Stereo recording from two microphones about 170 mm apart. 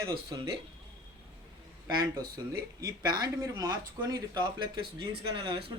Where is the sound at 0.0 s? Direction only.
25° right (ahead or behind).